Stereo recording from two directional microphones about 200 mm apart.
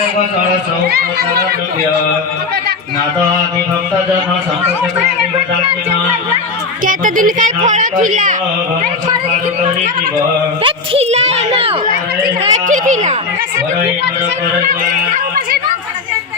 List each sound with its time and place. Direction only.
6.8 s speech: 40° right (ahead or behind)
10.6 s speech: 30° right (ahead or behind)
12.2 s speech: 40° right (ahead or behind)